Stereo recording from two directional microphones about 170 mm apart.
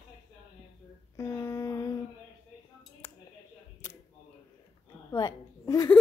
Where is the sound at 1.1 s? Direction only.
15° left (ahead or behind).